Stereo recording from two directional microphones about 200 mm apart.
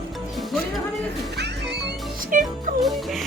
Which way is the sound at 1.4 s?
55° right (ahead or behind).